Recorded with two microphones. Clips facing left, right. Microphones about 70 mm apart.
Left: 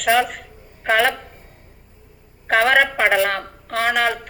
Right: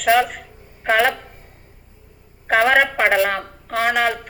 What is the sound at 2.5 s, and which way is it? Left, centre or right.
Speech, right.